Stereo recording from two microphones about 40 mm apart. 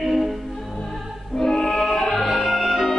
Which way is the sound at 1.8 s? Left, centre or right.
Left.